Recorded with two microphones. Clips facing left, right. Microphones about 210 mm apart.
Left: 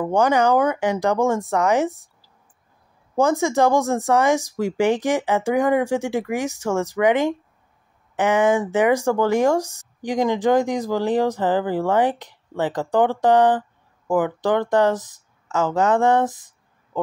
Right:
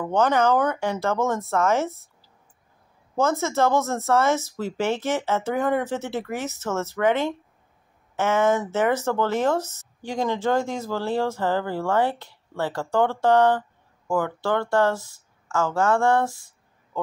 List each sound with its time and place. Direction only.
0.0 s speech: 15° left (ahead or behind)